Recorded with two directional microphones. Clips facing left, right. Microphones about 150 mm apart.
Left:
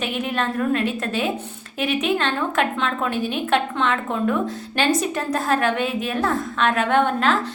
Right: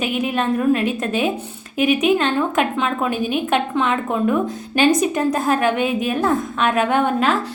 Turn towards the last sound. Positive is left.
turn(degrees=-10)  # may be behind; listen again after turning